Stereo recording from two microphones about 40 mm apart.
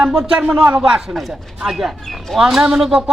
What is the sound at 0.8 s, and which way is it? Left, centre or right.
Speech, centre.